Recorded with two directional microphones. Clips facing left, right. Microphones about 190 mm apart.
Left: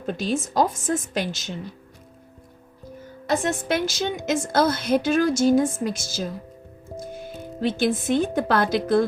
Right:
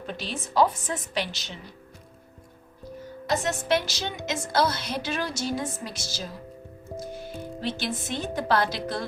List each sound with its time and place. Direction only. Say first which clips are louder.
0.0 s a woman's voice: left 9 dB; 45° left (ahead or behind)
3.2 s a woman's voice: left 2 dB; 50° left (ahead or behind)